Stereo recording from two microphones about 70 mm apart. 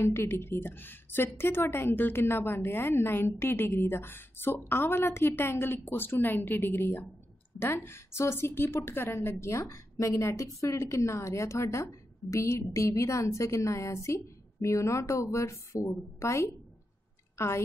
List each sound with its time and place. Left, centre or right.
0.0 s a woman's voice: left